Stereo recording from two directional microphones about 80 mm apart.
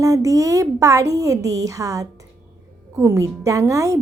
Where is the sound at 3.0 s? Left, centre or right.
Right.